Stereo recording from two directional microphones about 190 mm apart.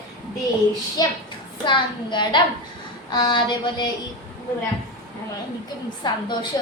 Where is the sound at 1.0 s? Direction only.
20° left (ahead or behind).